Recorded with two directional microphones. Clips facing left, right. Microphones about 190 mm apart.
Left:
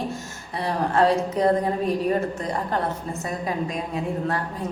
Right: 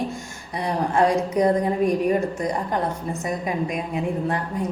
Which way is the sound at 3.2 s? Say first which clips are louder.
Right 2 dB; 15° right (ahead or behind).